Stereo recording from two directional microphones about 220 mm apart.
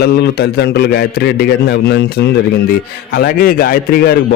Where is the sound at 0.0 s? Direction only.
45° left (ahead or behind).